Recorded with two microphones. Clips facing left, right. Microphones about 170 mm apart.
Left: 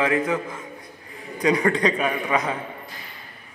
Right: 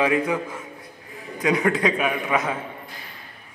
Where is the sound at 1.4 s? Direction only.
5° right (ahead or behind).